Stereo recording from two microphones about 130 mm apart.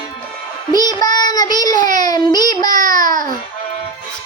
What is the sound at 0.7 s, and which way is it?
A child's voice, 30° left (ahead or behind).